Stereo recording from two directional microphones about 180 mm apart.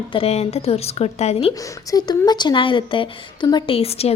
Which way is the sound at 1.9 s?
20° left (ahead or behind).